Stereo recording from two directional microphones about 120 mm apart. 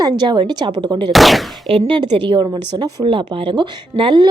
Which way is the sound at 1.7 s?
50° right (ahead or behind).